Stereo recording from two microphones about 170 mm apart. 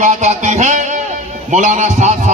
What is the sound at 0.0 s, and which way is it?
A man's voice, 45° right (ahead or behind).